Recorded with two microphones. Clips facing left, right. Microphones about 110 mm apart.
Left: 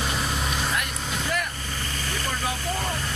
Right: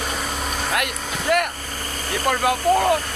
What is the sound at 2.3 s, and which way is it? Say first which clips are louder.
Speech: right 13 dB; 60° right (ahead or behind).